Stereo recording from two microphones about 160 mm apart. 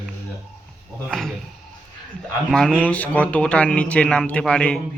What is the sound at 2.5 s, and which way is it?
A man's voice, 5° left (ahead or behind).